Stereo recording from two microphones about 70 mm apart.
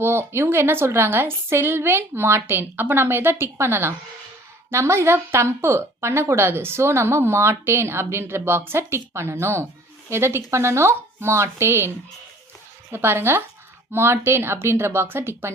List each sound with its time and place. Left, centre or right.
0.0 s a woman's voice: right
12.9 s a woman's voice: right